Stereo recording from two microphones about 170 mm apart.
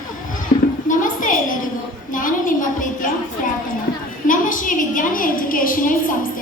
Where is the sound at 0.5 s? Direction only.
45° left (ahead or behind).